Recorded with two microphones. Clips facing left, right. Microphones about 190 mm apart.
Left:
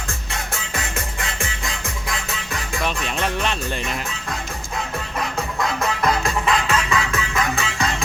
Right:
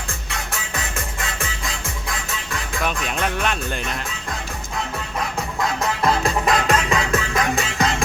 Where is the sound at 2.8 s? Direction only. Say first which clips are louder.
Even; 5° right (ahead or behind).